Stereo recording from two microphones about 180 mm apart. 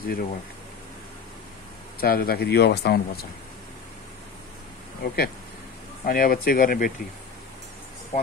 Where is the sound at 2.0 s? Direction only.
55° left (ahead or behind).